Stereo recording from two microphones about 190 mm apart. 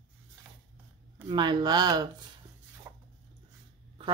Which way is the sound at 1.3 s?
25° right (ahead or behind).